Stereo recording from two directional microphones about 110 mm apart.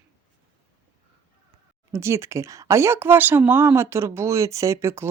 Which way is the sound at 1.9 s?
25° right (ahead or behind).